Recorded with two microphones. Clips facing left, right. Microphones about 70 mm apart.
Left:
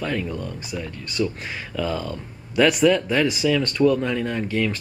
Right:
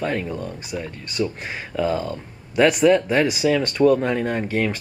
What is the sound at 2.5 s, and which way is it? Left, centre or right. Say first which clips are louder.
Speech: right 1 dB; centre.